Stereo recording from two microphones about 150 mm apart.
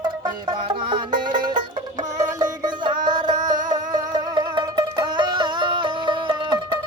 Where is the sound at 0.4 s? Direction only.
35° right (ahead or behind).